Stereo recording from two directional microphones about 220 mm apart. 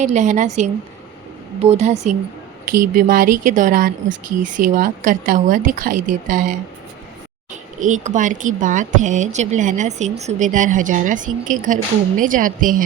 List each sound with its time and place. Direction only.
0.0 s speech: 35° right (ahead or behind)